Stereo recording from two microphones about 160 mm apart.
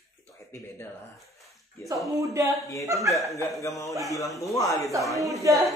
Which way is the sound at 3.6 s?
20° left (ahead or behind).